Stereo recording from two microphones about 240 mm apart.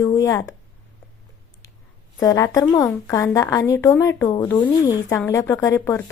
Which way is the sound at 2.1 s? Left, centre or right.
Centre.